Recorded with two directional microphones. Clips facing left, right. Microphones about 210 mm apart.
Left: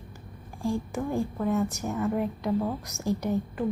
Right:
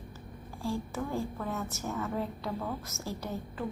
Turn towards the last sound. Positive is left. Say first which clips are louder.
# left 8 dB
turn(degrees=15)  # may be behind; listen again after turning